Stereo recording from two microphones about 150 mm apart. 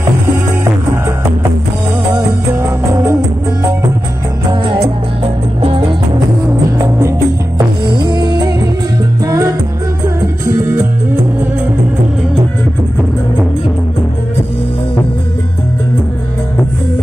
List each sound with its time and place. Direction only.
2.1 s music: 20° right (ahead or behind)
4.5 s music: 35° right (ahead or behind)
7.5 s music: 30° right (ahead or behind)